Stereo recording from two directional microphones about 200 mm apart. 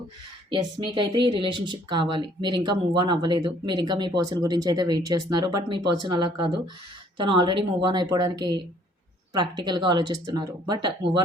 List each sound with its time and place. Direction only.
0.9 s speech: 25° right (ahead or behind)